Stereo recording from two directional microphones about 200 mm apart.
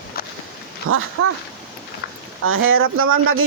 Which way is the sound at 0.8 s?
90° right.